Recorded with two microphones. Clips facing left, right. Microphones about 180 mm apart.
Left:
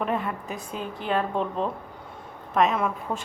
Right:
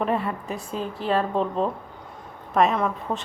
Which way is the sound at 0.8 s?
35° right (ahead or behind).